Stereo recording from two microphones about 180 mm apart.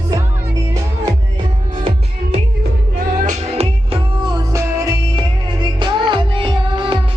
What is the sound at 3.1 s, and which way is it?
Music, 45° right (ahead or behind).